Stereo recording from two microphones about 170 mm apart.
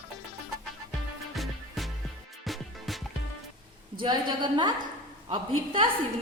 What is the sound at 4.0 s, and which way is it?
A woman's voice, 25° right (ahead or behind).